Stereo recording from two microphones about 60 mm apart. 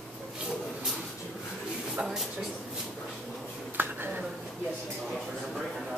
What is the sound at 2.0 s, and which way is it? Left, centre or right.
Speech, centre.